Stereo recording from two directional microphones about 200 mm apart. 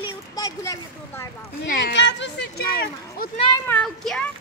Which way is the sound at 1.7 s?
55° left (ahead or behind).